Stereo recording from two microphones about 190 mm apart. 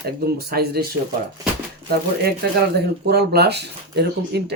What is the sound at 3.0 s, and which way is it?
Speech, 55° right (ahead or behind).